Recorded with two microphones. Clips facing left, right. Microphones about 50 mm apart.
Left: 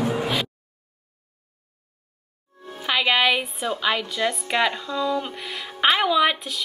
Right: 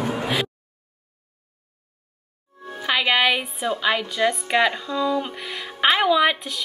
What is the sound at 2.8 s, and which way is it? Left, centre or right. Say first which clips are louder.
Music: right 1 dB; centre.